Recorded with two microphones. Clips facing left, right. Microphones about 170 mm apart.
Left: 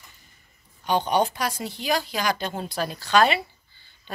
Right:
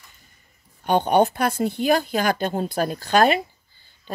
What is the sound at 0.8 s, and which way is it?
Speech, 55° right (ahead or behind).